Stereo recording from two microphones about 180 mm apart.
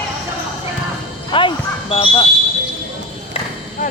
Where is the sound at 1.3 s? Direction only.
25° left (ahead or behind).